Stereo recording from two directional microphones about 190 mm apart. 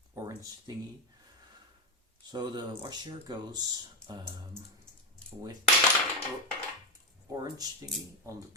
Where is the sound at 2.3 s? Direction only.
20° right (ahead or behind).